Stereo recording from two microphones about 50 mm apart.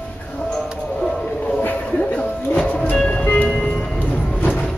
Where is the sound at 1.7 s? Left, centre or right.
Left.